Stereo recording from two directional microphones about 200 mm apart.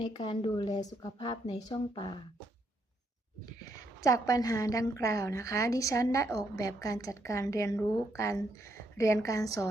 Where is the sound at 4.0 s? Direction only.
15° left (ahead or behind).